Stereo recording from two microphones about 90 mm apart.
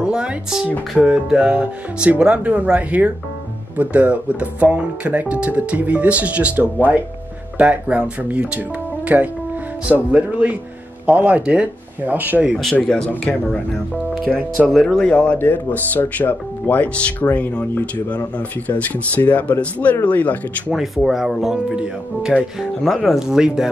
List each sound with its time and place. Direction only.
0.0 s speech: 10° right (ahead or behind)
12.8 s speech: 10° left (ahead or behind)
15.3 s speech: 20° left (ahead or behind)
20.7 s speech: centre (ahead or behind)